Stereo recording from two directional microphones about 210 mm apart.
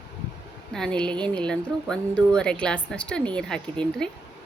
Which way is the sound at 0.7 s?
5° left (ahead or behind).